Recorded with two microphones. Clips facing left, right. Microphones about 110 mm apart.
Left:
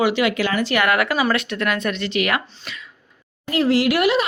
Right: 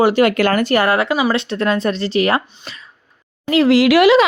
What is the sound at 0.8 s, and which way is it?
Speech, 30° right (ahead or behind).